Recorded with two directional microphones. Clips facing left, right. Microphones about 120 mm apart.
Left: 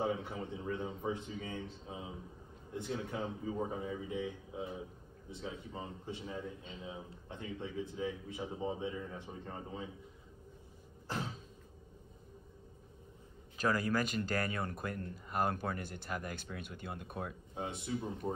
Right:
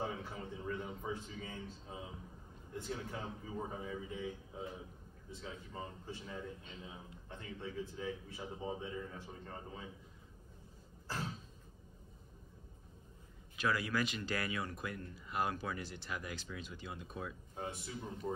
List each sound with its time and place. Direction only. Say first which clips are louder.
0.0 s speech: left 5 dB; 20° left (ahead or behind)
5.3 s speech: left 4 dB; 20° left (ahead or behind)
13.6 s speech: left 3 dB; 45° left (ahead or behind)
17.6 s speech: left 3 dB; 20° left (ahead or behind)
18.2 s speech: even; 30° left (ahead or behind)